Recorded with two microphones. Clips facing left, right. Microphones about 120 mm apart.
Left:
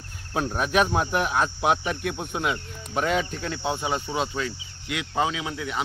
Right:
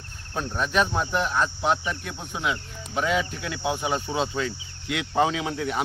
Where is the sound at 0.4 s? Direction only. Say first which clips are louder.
Left 1 dB; 10° left (ahead or behind).